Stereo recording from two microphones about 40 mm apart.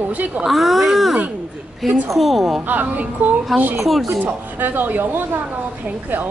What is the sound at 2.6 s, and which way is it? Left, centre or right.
Speech, right.